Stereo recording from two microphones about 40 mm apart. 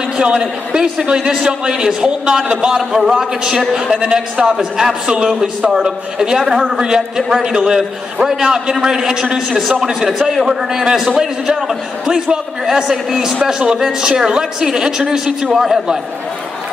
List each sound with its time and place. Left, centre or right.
0.2 s a woman's voice: right
2.8 s a man's voice: centre
4.1 s a woman's voice: right; by 13.4 s centre
13.5 s a woman's voice: right